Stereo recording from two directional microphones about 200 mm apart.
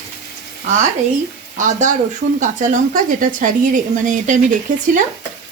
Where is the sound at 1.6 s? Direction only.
40° right (ahead or behind).